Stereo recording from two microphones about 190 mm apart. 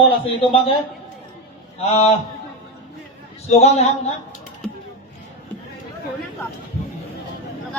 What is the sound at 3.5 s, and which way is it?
Speech, 35° left (ahead or behind).